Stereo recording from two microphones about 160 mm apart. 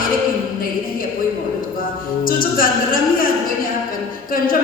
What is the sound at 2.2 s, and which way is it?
Music, 60° left (ahead or behind).